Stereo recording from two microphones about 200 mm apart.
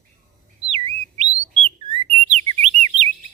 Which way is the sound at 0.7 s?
30° right (ahead or behind).